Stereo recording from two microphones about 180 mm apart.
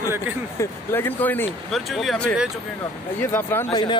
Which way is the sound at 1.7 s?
Centre (ahead or behind).